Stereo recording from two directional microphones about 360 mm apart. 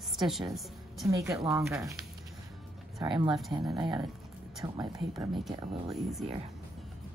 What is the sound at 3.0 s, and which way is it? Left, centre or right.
A woman's voice, centre.